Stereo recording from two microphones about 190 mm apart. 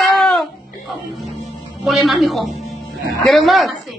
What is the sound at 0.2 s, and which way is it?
Music, centre (ahead or behind).